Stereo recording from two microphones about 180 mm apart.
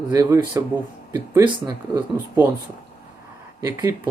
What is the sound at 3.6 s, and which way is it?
Speech, 15° right (ahead or behind).